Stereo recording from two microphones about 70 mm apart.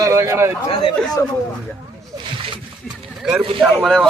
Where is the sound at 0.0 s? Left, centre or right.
Right.